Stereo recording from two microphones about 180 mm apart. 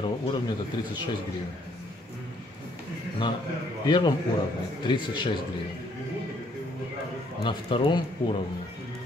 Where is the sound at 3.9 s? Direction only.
25° left (ahead or behind).